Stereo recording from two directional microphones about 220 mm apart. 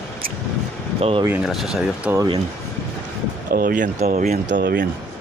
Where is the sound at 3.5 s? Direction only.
40° right (ahead or behind).